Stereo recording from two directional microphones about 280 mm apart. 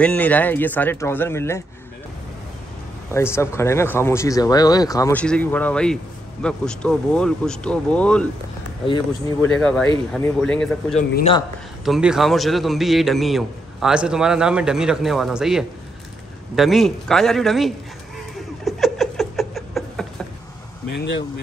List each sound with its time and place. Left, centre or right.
0.0 s speech: centre
3.1 s a man's voice: centre
8.8 s speech: centre
9.5 s a man's voice: centre
11.0 s a man's voice: left
11.8 s a man's voice: centre
18.6 s a sound: centre
20.9 s speech: left